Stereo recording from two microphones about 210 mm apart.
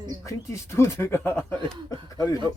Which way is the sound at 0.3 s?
15° left (ahead or behind).